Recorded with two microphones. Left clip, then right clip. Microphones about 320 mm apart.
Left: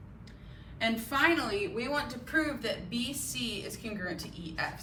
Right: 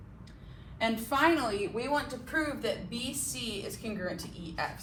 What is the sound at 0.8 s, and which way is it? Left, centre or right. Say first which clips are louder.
A woman's voice: even; centre.